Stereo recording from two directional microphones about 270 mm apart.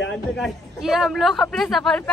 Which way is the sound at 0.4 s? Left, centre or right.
Centre.